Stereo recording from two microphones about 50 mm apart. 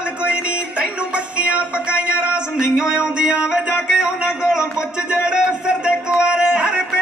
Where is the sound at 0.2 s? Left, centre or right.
Right.